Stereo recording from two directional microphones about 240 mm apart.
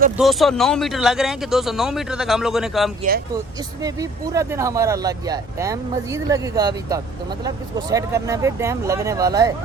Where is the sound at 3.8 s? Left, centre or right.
Centre.